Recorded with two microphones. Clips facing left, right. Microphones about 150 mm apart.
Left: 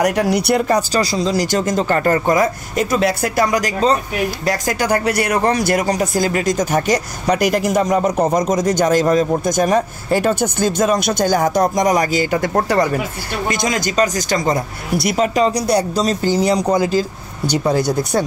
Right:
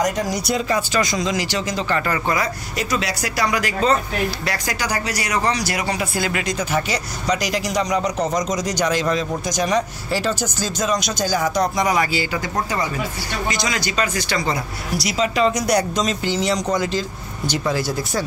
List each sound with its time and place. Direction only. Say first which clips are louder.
0.0 s speech: left 5 dB; 65° left (ahead or behind)
0.7 s speech: left 4 dB; 35° left (ahead or behind); by 13.0 s 65° left (ahead or behind)
13.5 s speech: left 6 dB; 50° left (ahead or behind)
15.4 s speech: left 2 dB; 30° left (ahead or behind)